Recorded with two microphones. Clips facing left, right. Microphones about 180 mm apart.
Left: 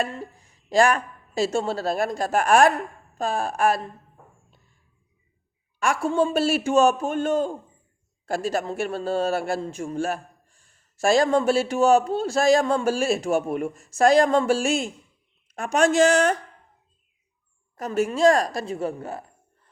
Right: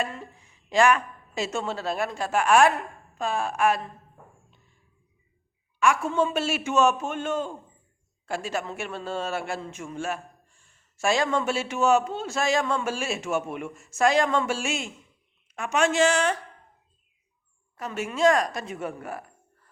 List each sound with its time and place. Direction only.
0.0 s a woman's voice: 40° left (ahead or behind)
5.8 s a man's voice: 35° left (ahead or behind)
17.7 s a man's voice: 40° left (ahead or behind)